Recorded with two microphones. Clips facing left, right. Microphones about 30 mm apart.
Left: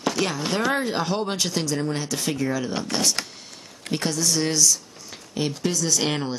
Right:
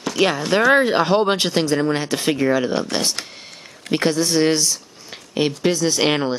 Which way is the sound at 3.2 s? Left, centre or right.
Right.